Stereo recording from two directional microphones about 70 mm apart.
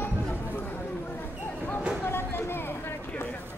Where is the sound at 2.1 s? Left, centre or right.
Left.